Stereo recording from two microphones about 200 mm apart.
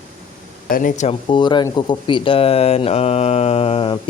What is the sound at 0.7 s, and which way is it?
Speech, 40° left (ahead or behind).